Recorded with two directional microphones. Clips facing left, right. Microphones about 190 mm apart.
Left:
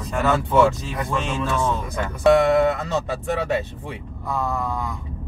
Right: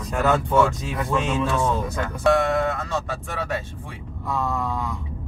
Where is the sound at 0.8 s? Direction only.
5° right (ahead or behind).